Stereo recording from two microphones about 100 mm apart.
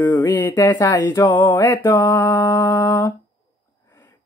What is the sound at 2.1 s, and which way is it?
Humming, 30° left (ahead or behind).